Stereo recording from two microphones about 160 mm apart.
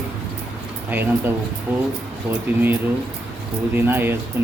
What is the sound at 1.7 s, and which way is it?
Speech, 10° right (ahead or behind).